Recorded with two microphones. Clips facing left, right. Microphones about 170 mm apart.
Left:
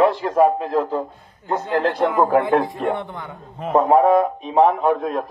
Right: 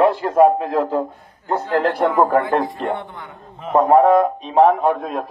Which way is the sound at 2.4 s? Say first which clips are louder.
Left 1 dB; 20° left (ahead or behind).